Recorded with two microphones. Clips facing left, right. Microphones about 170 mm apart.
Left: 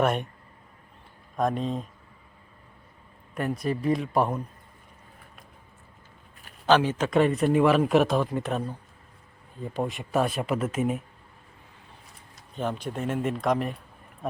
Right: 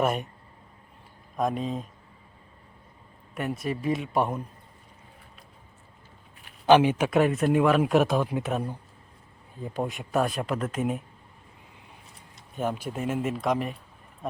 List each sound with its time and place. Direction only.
0.0 s a man's voice: 5° right (ahead or behind)
1.4 s a man's voice: centre (ahead or behind)
3.3 s speech: 25° right (ahead or behind)
4.1 s a man's voice: 5° right (ahead or behind)
6.7 s a man's voice: 15° right (ahead or behind); by 11.0 s centre (ahead or behind)
12.5 s a man's voice: 10° right (ahead or behind)